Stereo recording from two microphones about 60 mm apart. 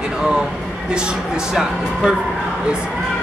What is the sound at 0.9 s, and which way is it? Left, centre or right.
A woman's voice, centre.